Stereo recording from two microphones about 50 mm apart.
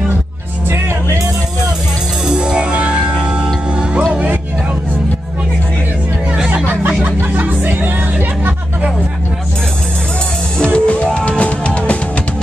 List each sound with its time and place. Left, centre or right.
2.2 s music: centre
7.3 s music: right
10.6 s music: centre